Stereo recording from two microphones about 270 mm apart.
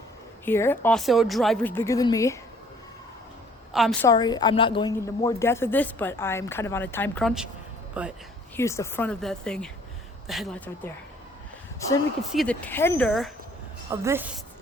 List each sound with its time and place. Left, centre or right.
0.4 s a woman's voice: centre
3.7 s a woman's voice: centre
4.1 s a woman's voice: centre
8.5 s a woman's voice: centre
12.2 s speech: centre
13.9 s a woman's voice: centre